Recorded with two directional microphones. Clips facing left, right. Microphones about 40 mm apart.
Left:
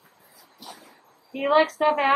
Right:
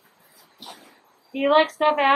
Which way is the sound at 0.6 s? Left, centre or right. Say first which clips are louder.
Right 1 dB; right.